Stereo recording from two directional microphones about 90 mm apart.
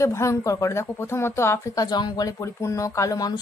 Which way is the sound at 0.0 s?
35° left (ahead or behind).